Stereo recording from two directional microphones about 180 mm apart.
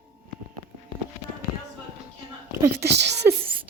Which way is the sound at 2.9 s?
70° right (ahead or behind).